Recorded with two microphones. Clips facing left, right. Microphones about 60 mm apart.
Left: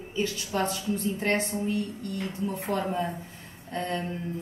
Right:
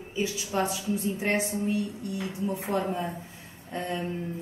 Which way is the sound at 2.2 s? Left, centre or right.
Centre.